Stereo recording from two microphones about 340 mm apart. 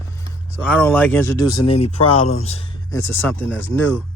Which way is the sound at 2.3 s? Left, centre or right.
Centre.